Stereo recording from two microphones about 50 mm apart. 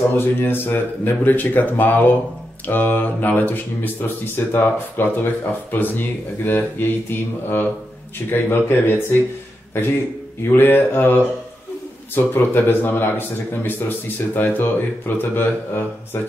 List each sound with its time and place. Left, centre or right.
0.1 s speech: left
10.4 s speech: left
12.2 s speech: left